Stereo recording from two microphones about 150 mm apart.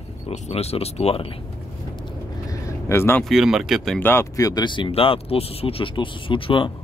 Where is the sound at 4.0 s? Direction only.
15° left (ahead or behind); by 6.7 s 35° left (ahead or behind).